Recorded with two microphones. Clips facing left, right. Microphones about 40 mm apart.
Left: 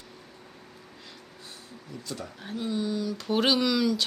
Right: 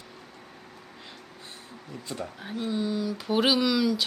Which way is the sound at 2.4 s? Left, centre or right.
Centre.